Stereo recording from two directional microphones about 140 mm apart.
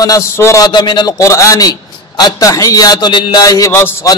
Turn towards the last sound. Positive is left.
turn(degrees=15)  # may be behind; listen again after turning